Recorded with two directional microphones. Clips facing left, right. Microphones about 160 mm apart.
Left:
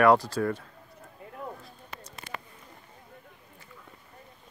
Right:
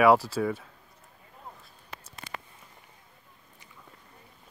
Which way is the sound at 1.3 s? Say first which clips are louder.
Left 9 dB; 80° left.